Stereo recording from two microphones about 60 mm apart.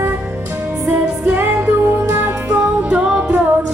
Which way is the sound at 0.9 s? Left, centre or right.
Right.